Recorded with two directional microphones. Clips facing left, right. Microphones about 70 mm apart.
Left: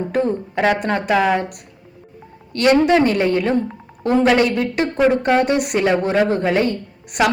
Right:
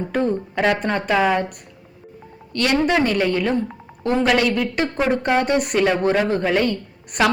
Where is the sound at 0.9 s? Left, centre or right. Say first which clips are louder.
Left 1 dB; centre.